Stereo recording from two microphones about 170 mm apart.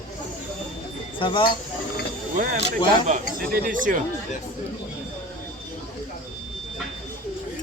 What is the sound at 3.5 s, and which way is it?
Speech, 60° right (ahead or behind).